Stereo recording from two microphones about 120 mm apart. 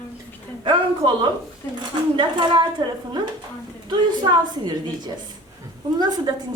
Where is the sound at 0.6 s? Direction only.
40° right (ahead or behind).